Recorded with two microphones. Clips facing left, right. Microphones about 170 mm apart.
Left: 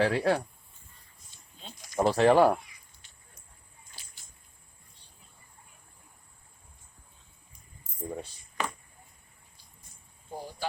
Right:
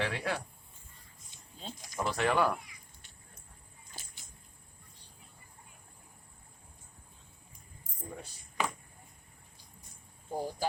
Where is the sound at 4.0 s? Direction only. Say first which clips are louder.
Right 6 dB; 45° right (ahead or behind).